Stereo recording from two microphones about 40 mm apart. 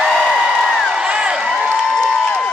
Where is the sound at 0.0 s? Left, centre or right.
Centre.